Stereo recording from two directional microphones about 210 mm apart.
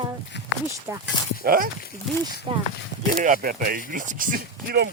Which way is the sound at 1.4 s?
45° right (ahead or behind).